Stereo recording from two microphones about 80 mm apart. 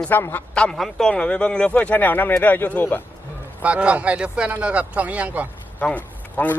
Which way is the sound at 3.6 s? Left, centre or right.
Centre.